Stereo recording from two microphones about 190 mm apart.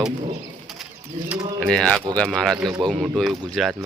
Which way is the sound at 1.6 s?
5° left (ahead or behind).